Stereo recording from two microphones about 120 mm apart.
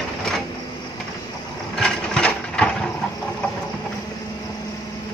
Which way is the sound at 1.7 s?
5° left (ahead or behind).